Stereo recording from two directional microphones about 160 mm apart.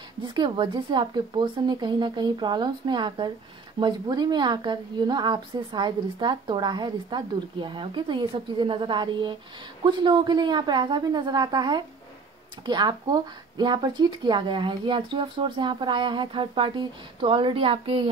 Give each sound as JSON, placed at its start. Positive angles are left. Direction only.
{"t": 0.2, "sound": "a woman's voice", "side_deg": -30}